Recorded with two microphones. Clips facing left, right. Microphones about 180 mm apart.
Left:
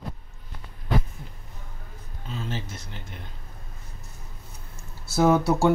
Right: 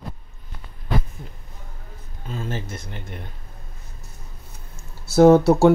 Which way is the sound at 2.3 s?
50° right (ahead or behind).